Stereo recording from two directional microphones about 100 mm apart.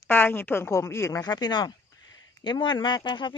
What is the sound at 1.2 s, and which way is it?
Speech, 45° left (ahead or behind).